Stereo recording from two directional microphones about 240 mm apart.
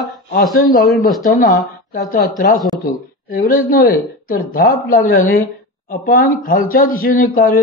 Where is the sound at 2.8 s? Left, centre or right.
Left.